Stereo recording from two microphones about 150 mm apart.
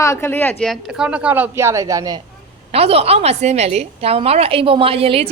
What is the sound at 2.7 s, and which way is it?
A woman's voice, 40° right (ahead or behind).